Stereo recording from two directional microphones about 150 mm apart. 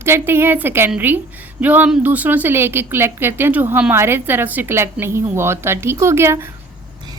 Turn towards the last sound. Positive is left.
turn(degrees=-15)  # may be behind; listen again after turning